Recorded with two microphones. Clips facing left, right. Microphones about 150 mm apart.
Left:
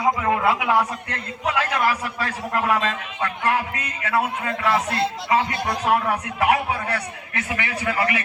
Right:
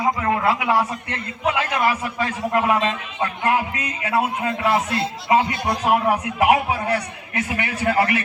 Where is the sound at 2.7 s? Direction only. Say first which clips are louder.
Right 2 dB; 25° right (ahead or behind).